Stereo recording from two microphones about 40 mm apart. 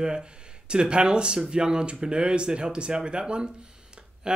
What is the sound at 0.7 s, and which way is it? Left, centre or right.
Speech, right.